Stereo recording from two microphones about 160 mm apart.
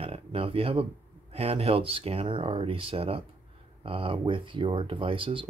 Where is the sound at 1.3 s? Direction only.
40° right (ahead or behind).